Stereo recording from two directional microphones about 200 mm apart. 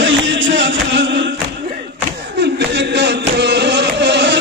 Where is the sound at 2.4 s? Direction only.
60° right (ahead or behind).